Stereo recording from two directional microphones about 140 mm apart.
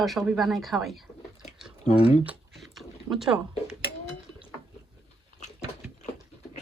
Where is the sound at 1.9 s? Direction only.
45° left (ahead or behind).